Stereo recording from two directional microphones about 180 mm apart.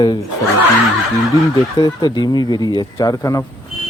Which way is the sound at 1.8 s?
20° left (ahead or behind).